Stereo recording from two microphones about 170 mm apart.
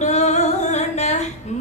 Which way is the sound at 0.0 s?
40° left (ahead or behind).